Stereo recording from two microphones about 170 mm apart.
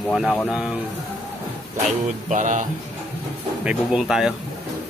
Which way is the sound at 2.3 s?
45° right (ahead or behind).